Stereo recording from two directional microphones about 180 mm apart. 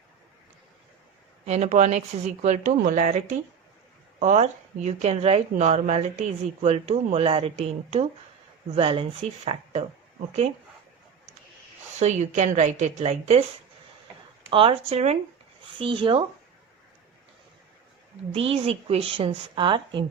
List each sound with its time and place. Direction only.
1.5 s speech: 40° right (ahead or behind)
11.9 s speech: 40° right (ahead or behind)
14.5 s speech: 30° right (ahead or behind)
18.3 s speech: 35° right (ahead or behind)